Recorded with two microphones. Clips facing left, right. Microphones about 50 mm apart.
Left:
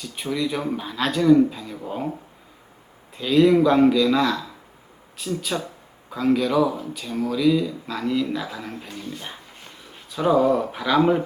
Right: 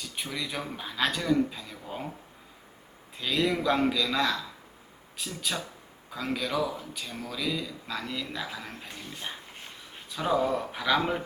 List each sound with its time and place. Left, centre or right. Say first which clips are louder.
0.0 s speech: left 9 dB; centre
3.2 s speech: left 11 dB; centre
8.9 s speech: left 8 dB; centre
10.2 s speech: left 8 dB; centre